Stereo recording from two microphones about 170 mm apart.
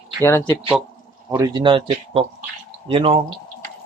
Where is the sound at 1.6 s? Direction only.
30° right (ahead or behind).